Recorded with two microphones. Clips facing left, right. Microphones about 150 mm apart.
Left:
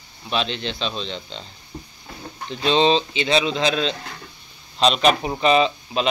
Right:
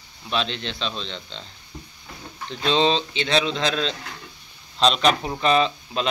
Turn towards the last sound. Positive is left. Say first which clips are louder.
# left 3 dB
turn(degrees=5)  # may be behind; listen again after turning